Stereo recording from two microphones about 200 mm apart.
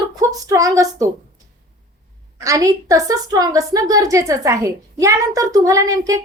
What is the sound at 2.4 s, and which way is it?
A child's voice, 15° right (ahead or behind).